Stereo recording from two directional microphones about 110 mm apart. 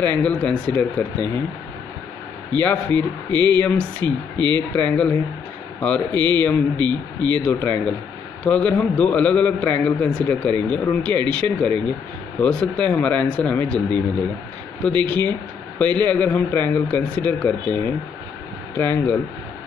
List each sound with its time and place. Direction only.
0.0 s a man's voice: 15° left (ahead or behind)
2.6 s a man's voice: 15° left (ahead or behind)
8.5 s a man's voice: 10° left (ahead or behind)
18.8 s speech: 20° left (ahead or behind)